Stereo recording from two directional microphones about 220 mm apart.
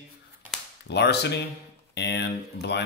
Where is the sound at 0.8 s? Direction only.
50° left (ahead or behind).